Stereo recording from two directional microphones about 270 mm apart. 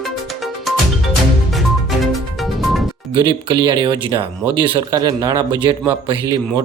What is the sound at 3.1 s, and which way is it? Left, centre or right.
Speech, centre.